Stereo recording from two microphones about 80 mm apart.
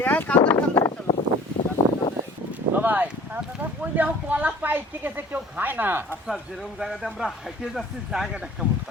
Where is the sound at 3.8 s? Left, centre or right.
Centre.